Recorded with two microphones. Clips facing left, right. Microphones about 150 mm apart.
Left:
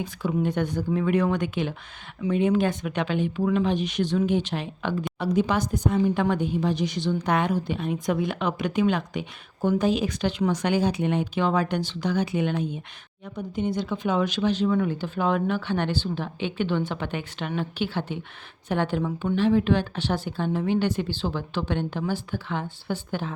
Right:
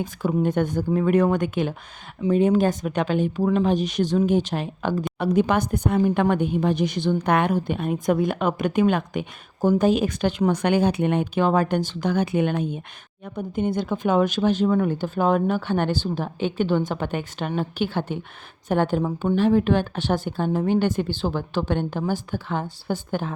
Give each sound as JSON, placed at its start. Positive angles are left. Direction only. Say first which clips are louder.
{"t": 0.0, "sound": "a woman's voice", "louder": "right 3 dB", "side_deg": -45}
{"t": 5.2, "sound": "a woman's voice", "louder": "right 3 dB", "side_deg": -55}